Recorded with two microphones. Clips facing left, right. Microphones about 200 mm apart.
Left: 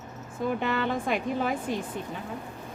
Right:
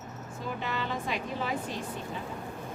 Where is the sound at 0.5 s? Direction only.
55° left (ahead or behind).